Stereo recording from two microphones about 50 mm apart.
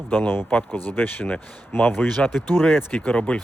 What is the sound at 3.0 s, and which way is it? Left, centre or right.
Speech, left.